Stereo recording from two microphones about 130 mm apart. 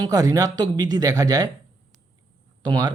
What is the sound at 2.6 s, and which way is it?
Speech, 35° right (ahead or behind).